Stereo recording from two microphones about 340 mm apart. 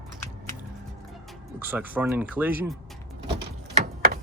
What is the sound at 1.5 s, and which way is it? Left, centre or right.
Speech, centre.